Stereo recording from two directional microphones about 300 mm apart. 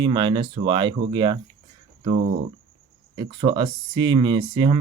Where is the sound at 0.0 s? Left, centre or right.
Centre.